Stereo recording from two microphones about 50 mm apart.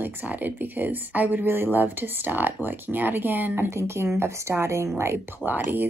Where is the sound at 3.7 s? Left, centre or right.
Right.